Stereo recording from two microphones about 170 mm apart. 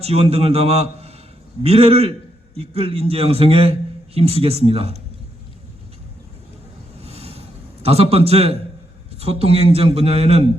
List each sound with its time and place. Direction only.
0.0 s a man's voice: 35° right (ahead or behind)
7.0 s a sound: 35° right (ahead or behind)
9.1 s a man's voice: 35° right (ahead or behind)